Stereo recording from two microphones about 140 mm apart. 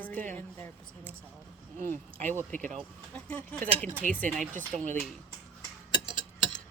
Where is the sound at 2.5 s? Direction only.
60° right (ahead or behind).